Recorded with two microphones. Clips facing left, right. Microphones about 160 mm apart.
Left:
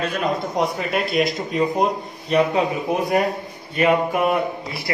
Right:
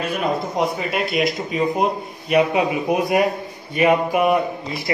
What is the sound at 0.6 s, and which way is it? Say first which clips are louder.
Speech: even; centre (ahead or behind).